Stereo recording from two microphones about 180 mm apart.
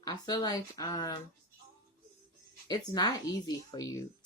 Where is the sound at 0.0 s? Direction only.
20° left (ahead or behind).